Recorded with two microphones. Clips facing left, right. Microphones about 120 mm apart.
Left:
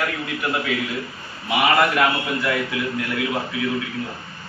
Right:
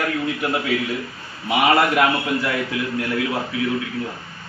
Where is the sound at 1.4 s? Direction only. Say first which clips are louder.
Right 1 dB; 30° right (ahead or behind).